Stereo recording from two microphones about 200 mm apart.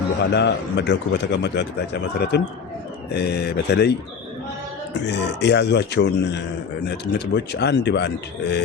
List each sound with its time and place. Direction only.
0.2 s speech: 60° left (ahead or behind)
5.0 s speech: 60° left (ahead or behind)